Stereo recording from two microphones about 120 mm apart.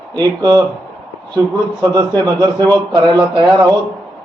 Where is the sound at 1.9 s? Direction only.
35° right (ahead or behind).